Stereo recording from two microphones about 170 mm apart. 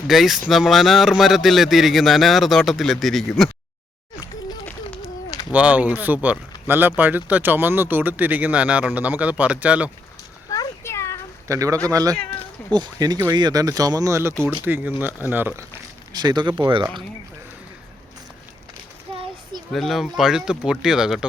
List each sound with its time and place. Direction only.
0.1 s speech: centre (ahead or behind)
5.5 s speech: 10° right (ahead or behind)
10.5 s a sound: 20° left (ahead or behind)
11.4 s speech: 20° right (ahead or behind)
16.1 s speech: 25° right (ahead or behind)
19.1 s children playing: 35° right (ahead or behind)
19.7 s speech: centre (ahead or behind)